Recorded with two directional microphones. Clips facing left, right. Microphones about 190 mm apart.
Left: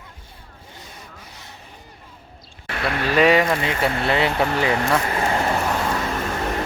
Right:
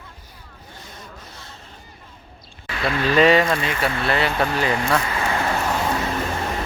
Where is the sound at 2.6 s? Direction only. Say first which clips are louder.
Right 1 dB; 65° left (ahead or behind).